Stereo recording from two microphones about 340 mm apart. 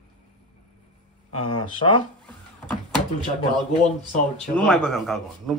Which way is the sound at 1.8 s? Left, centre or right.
Centre.